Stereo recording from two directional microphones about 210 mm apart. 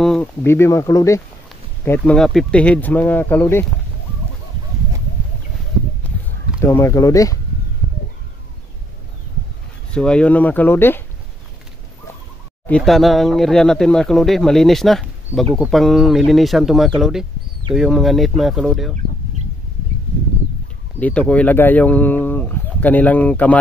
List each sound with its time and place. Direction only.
0.0 s speech: 5° left (ahead or behind)
1.9 s speech: 5° left (ahead or behind)
6.6 s speech: 15° left (ahead or behind)
9.8 s speech: 5° left (ahead or behind)
12.6 s speech: 5° left (ahead or behind)
21.0 s speech: 5° left (ahead or behind)